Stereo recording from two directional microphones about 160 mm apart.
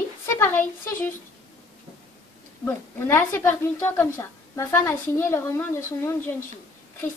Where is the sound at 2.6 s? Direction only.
15° left (ahead or behind).